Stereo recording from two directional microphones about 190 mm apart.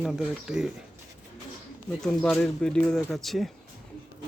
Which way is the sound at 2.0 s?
5° left (ahead or behind).